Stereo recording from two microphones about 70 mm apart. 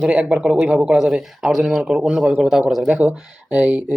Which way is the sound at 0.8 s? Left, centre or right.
Centre.